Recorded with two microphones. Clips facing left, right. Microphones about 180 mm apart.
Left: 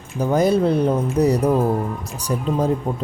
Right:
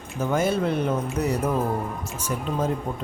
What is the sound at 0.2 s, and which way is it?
Speech, 35° left (ahead or behind).